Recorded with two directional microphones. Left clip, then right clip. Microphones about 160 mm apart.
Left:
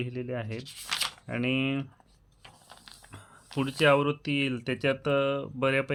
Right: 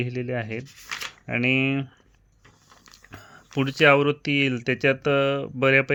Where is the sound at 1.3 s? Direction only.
30° right (ahead or behind).